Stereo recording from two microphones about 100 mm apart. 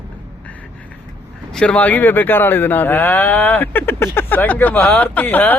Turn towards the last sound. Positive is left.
turn(degrees=20)  # may be behind; listen again after turning